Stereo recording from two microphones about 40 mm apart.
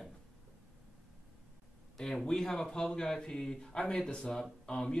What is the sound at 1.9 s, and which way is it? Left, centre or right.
Speech, centre.